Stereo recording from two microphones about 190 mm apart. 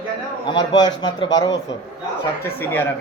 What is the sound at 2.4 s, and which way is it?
Speech, 10° left (ahead or behind).